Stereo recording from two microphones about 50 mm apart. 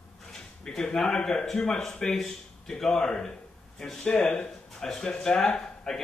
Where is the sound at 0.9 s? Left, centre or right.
Centre.